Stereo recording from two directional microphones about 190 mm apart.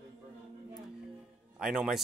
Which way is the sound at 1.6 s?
5° right (ahead or behind).